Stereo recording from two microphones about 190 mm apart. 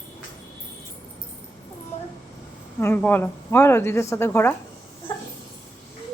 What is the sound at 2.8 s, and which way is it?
A woman's voice, 10° left (ahead or behind).